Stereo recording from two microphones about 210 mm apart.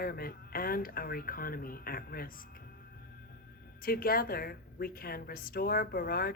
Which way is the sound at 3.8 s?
45° left (ahead or behind).